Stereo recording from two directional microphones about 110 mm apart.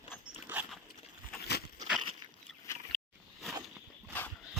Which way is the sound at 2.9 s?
Centre (ahead or behind).